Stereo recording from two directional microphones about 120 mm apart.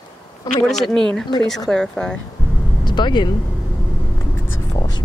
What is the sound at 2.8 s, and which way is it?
Speech, 40° left (ahead or behind).